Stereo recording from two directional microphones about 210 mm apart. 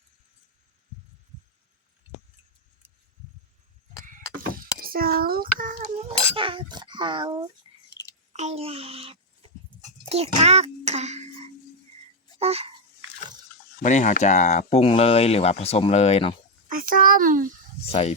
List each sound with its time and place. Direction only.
4.8 s cutlery: 45° right (ahead or behind); by 7.4 s 20° right (ahead or behind)
7.6 s a sound: 25° right (ahead or behind)
8.3 s a child's voice: 30° right (ahead or behind)
9.4 s horse: 30° right (ahead or behind)
10.1 s a child's voice: 30° right (ahead or behind)
12.4 s speech: 30° right (ahead or behind)
13.8 s speech: 35° left (ahead or behind)
16.6 s a sound: 40° right (ahead or behind)
17.9 s speech: 30° left (ahead or behind)